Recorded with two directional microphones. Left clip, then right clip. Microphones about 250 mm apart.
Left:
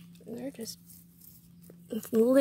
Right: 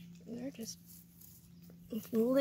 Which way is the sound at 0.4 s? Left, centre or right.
Centre.